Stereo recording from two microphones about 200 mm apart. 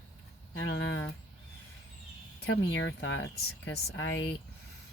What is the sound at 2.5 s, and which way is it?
Speech, 60° left (ahead or behind).